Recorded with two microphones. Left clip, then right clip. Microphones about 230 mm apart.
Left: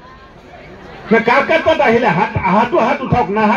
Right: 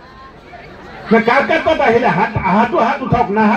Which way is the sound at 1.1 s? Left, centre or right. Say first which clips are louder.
Even; left.